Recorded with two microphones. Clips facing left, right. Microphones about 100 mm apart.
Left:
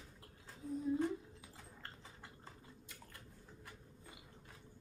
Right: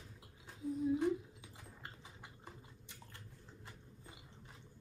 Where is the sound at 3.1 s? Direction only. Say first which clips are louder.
Even; 25° right (ahead or behind).